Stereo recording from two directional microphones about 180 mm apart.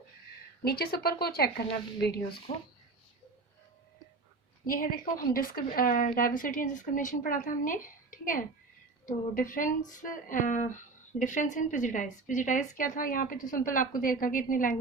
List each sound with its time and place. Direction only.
0.6 s a woman's voice: 60° left (ahead or behind)
2.5 s speech: 30° left (ahead or behind)
4.6 s a woman's voice: 50° left (ahead or behind)